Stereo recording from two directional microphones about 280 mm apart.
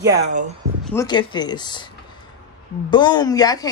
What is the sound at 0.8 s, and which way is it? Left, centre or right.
Speech, centre.